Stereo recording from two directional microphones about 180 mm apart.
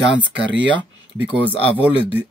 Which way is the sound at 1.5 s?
30° left (ahead or behind).